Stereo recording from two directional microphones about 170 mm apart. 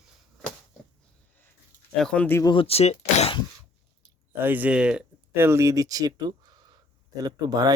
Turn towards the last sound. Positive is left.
turn(degrees=-20)  # may be behind; listen again after turning